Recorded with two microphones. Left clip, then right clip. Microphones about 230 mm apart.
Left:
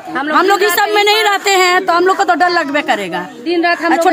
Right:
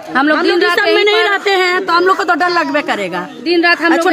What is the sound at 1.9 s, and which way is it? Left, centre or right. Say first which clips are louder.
A woman's voice: even; centre.